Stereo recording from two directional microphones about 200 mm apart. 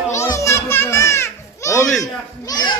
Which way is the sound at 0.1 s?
15° left (ahead or behind).